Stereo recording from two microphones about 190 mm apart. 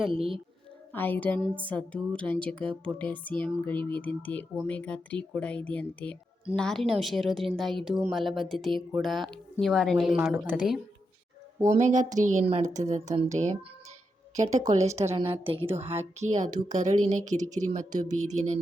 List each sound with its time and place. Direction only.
0.1 s a woman's voice: 30° right (ahead or behind)
0.9 s music: 10° left (ahead or behind)
6.6 s a woman's voice: centre (ahead or behind)
11.6 s a woman's voice: 40° right (ahead or behind)